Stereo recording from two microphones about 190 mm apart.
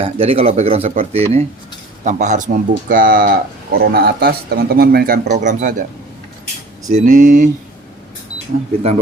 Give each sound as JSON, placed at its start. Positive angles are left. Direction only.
{"t": 0.0, "sound": "speech", "side_deg": -30}
{"t": 6.9, "sound": "speech", "side_deg": -45}